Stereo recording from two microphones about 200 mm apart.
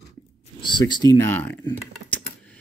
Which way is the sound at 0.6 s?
20° left (ahead or behind).